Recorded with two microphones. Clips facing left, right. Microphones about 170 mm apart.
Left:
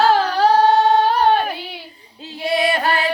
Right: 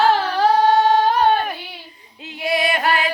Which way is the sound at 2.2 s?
30° left (ahead or behind).